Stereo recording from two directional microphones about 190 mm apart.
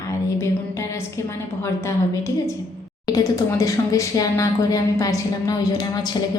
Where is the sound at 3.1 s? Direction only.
20° left (ahead or behind).